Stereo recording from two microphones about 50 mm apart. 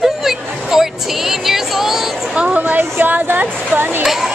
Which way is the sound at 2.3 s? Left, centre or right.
Right.